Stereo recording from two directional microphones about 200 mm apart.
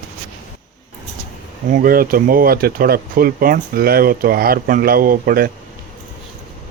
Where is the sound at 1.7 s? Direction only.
45° right (ahead or behind).